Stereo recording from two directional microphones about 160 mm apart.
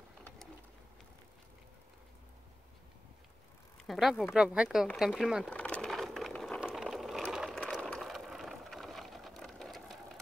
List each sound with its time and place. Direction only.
3.8 s speech: centre (ahead or behind)
4.9 s sewing machine: centre (ahead or behind)
6.6 s vehicle: centre (ahead or behind)